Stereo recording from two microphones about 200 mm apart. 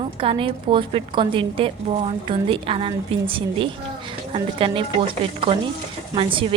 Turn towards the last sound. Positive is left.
turn(degrees=-25)  # may be behind; listen again after turning